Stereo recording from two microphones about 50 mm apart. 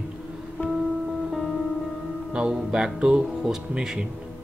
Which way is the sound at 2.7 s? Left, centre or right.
Centre.